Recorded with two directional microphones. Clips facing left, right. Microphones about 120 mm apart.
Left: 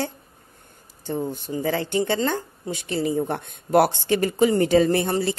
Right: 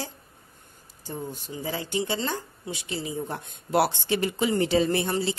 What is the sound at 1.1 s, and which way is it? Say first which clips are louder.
A woman's voice: left 8 dB; 55° left (ahead or behind).